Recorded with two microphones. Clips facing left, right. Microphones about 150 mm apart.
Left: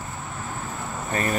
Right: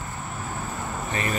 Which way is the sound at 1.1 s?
45° left (ahead or behind).